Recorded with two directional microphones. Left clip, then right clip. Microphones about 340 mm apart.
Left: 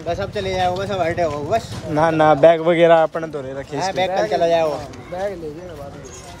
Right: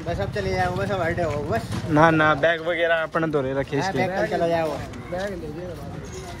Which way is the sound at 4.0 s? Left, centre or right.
Left.